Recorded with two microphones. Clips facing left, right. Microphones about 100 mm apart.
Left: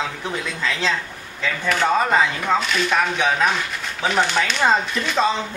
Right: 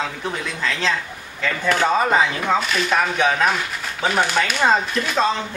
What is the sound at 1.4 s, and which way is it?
Speech, centre (ahead or behind).